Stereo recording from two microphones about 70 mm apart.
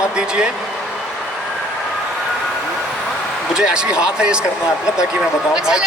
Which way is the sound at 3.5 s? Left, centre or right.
Centre.